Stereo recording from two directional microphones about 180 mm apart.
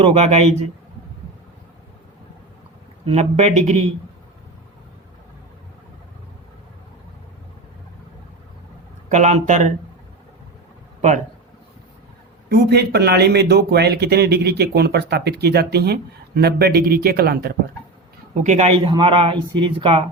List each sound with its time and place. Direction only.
0.0 s speech: 35° right (ahead or behind)
3.1 s speech: 35° right (ahead or behind)
9.0 s speech: 40° right (ahead or behind)
12.5 s a man's voice: 65° right (ahead or behind)
18.4 s speech: 40° right (ahead or behind)
18.9 s speech: 25° right (ahead or behind)